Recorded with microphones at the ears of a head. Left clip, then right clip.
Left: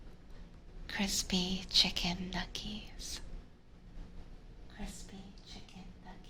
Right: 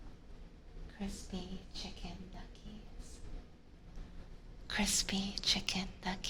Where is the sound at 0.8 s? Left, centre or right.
Left.